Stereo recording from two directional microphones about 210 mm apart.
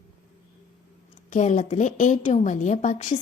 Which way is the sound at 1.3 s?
35° left (ahead or behind).